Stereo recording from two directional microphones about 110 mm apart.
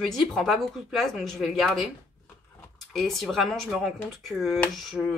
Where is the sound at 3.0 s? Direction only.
Centre (ahead or behind).